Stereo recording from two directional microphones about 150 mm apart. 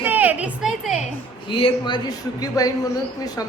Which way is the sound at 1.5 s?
35° left (ahead or behind).